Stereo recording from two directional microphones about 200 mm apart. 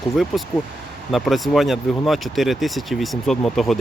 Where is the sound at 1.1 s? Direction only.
Centre (ahead or behind).